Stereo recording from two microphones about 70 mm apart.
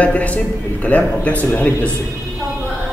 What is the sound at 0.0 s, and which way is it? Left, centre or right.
A man's voice, left.